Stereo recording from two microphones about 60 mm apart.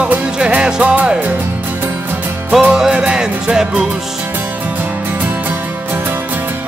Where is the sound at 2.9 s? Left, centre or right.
Centre.